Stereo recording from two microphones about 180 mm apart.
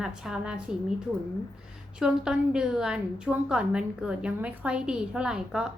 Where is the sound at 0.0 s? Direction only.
5° right (ahead or behind).